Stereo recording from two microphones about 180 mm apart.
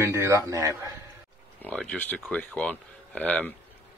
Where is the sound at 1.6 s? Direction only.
5° left (ahead or behind).